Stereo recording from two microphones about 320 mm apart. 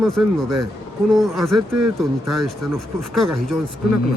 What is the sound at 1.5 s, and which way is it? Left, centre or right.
Speech, right.